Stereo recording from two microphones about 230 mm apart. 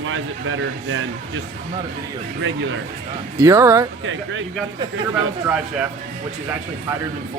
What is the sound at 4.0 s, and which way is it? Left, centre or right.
Speech, right.